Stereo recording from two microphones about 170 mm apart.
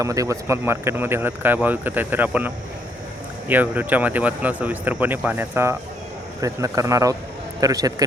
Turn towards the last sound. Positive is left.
turn(degrees=-20)  # may be behind; listen again after turning